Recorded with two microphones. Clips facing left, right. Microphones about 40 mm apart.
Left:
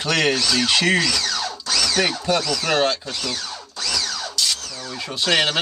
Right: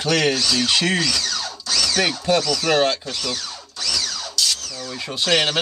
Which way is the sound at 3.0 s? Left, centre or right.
Centre.